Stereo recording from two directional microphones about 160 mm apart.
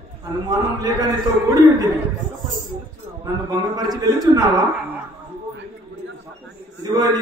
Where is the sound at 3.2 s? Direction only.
25° right (ahead or behind).